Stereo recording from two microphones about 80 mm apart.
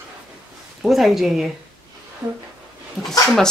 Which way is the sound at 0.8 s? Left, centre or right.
Centre.